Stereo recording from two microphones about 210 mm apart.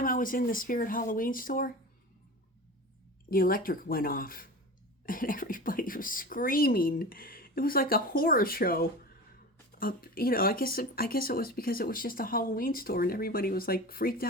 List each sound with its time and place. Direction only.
0.0 s speech: 40° left (ahead or behind)
3.2 s speech: 45° left (ahead or behind)